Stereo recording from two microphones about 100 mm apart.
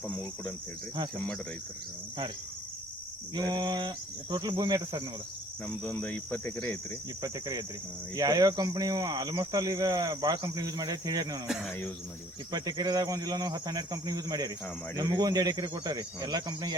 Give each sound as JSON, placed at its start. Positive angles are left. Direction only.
{"t": 0.1, "sound": "speech", "side_deg": 10}
{"t": 3.3, "sound": "speech", "side_deg": -45}
{"t": 5.6, "sound": "speech", "side_deg": 10}
{"t": 7.2, "sound": "speech", "side_deg": -40}
{"t": 11.4, "sound": "speech", "side_deg": -5}
{"t": 12.5, "sound": "speech", "side_deg": -45}